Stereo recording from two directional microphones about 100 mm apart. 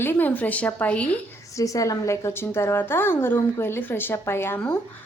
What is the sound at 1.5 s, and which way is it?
Speech, 35° left (ahead or behind).